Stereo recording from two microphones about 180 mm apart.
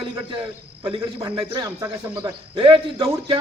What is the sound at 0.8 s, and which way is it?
Speech, 15° right (ahead or behind).